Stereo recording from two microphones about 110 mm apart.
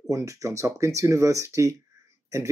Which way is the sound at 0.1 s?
30° right (ahead or behind).